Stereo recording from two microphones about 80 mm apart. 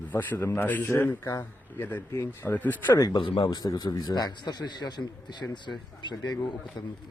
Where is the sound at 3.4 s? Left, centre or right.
Left.